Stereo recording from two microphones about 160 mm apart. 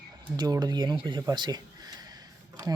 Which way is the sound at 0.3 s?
25° right (ahead or behind).